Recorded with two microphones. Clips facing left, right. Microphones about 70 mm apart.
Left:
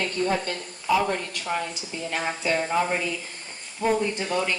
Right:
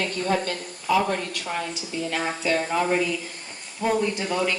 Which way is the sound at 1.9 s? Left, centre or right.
Left.